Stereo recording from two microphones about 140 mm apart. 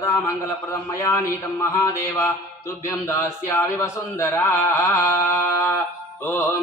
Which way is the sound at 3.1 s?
20° left (ahead or behind).